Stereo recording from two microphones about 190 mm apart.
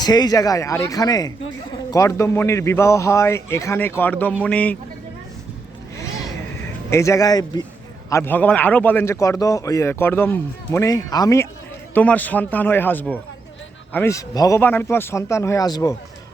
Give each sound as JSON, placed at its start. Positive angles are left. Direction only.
{"t": 0.0, "sound": "a man's voice", "side_deg": 20}
{"t": 6.9, "sound": "a man's voice", "side_deg": 15}